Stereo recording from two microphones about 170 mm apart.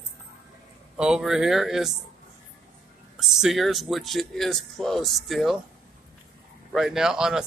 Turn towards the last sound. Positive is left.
turn(degrees=-5)  # may be behind; listen again after turning